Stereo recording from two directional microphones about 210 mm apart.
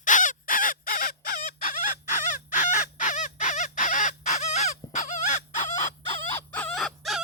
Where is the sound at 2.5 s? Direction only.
35° left (ahead or behind).